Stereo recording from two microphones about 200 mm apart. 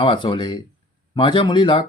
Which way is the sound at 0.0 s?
25° left (ahead or behind).